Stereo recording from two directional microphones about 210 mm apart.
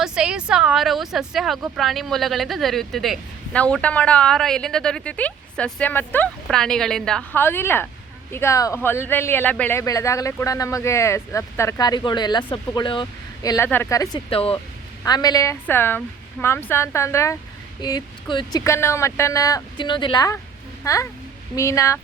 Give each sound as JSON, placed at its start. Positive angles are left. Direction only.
{"t": 0.0, "sound": "speech", "side_deg": -5}
{"t": 14.3, "sound": "speech", "side_deg": 25}